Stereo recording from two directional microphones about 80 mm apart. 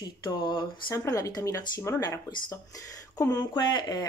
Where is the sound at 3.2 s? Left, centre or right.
Left.